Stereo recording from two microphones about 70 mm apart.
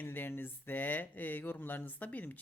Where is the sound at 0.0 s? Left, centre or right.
Left.